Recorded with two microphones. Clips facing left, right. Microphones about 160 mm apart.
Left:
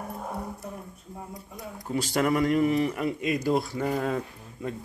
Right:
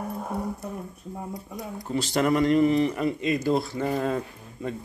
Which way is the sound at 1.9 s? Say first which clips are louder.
Right 2 dB; 10° left (ahead or behind).